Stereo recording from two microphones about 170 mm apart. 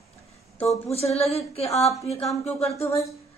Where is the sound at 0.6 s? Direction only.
35° left (ahead or behind).